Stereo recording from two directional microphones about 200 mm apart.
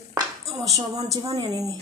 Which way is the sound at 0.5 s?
20° right (ahead or behind).